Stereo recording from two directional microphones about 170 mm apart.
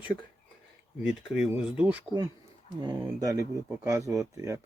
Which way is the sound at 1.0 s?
5° right (ahead or behind).